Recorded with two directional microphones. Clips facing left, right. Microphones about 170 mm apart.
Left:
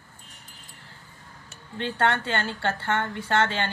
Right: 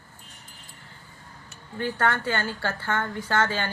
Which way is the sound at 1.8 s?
25° left (ahead or behind).